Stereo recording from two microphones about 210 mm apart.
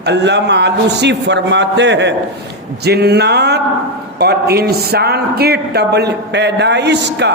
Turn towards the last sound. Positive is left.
turn(degrees=-55)  # may be behind; listen again after turning